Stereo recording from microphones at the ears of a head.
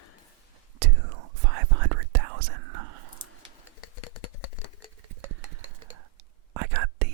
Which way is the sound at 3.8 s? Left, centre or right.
Left.